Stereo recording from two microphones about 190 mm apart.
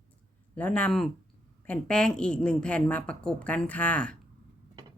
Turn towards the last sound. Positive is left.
turn(degrees=5)  # may be behind; listen again after turning